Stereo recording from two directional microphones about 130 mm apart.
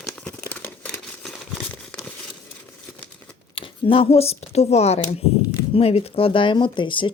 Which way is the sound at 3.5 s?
45° left (ahead or behind).